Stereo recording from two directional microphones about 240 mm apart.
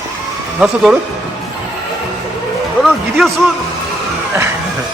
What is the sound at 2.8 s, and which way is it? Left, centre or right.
Music, centre.